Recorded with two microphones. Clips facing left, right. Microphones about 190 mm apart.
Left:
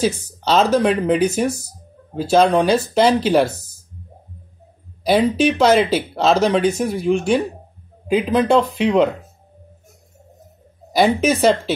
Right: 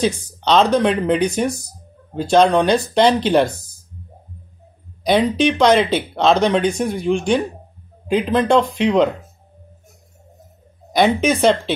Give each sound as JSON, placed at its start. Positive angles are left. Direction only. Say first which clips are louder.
{"t": 0.0, "sound": "speech", "louder": "even", "side_deg": 5}
{"t": 5.0, "sound": "speech", "louder": "even", "side_deg": 5}
{"t": 11.1, "sound": "speech", "louder": "even", "side_deg": 5}